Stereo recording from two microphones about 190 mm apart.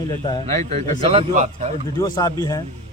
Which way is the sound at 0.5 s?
35° right (ahead or behind).